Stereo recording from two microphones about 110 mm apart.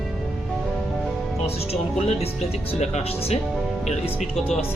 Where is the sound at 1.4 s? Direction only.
65° left (ahead or behind).